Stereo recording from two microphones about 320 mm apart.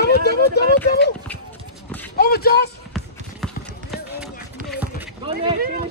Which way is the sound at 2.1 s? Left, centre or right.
Left.